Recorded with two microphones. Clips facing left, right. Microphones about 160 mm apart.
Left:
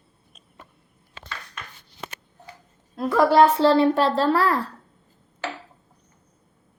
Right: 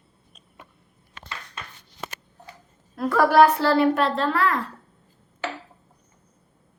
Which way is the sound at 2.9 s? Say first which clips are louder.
Left 1 dB; 20° left (ahead or behind).